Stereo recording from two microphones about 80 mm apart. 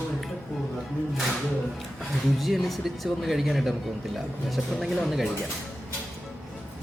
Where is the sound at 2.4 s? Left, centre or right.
Centre.